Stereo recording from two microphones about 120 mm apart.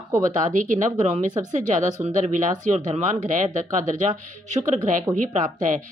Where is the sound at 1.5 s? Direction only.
90° right.